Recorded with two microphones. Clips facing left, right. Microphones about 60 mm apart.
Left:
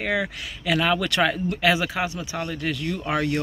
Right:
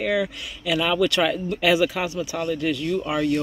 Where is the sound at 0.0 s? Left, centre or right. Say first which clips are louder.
Right 2 dB; left.